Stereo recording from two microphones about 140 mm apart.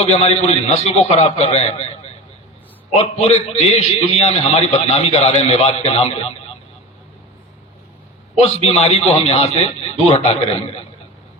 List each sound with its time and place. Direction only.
0.0 s a man's voice: 50° left (ahead or behind)
3.0 s a man's voice: 50° left (ahead or behind)
8.4 s a man's voice: 50° left (ahead or behind)